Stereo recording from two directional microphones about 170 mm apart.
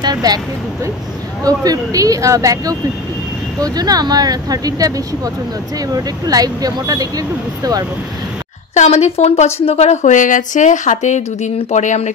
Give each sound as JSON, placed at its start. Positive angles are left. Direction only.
{"t": 0.0, "sound": "speech", "side_deg": -25}
{"t": 1.4, "sound": "speech", "side_deg": -20}
{"t": 8.7, "sound": "a woman's voice", "side_deg": 40}